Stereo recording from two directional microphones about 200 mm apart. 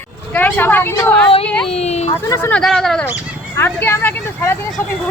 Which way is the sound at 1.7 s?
30° left (ahead or behind).